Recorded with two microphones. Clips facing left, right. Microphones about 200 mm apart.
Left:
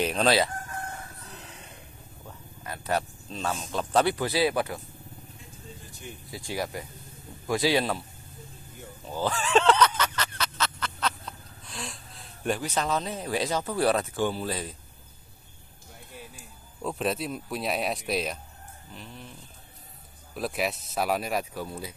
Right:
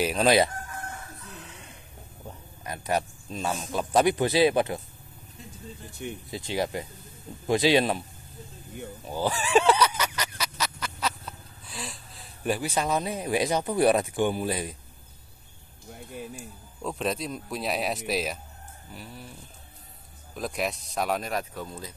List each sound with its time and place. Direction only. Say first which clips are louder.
0.0 s speech: right 2 dB; 10° right (ahead or behind)
2.2 s speech: right 2 dB; 15° right (ahead or behind)
6.0 s speech: right 8 dB; 60° right (ahead or behind)
6.3 s speech: right 3 dB; 25° right (ahead or behind)
9.0 s a sound: even; 10° right (ahead or behind)
16.8 s speech: left 1 dB; centre (ahead or behind)
20.3 s speech: left 1 dB; 5° left (ahead or behind)